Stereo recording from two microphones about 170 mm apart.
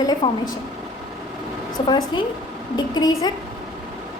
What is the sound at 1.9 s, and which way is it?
A woman's voice, 25° left (ahead or behind).